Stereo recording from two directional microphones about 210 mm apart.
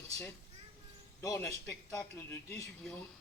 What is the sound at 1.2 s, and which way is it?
Speech, 15° left (ahead or behind).